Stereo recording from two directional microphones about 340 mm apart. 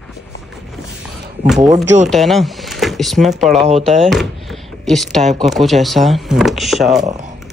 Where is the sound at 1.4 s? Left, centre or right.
Centre.